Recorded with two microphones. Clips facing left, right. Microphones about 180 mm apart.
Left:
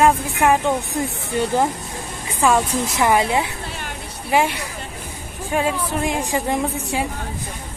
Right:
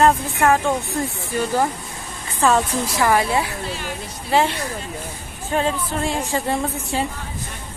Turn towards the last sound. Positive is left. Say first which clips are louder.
# left 1 dB
turn(degrees=15)  # may be behind; listen again after turning